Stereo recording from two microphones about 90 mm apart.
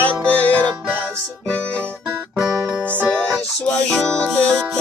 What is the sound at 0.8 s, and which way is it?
Music, 20° right (ahead or behind).